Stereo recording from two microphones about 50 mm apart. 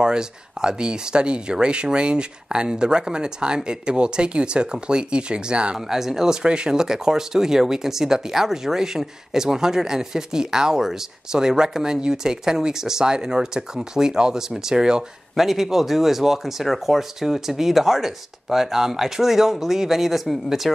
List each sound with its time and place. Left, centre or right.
0.0 s speech: centre
5.8 s speech: centre
15.3 s speech: centre